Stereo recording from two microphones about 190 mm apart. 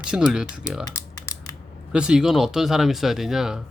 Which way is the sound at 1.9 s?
5° right (ahead or behind).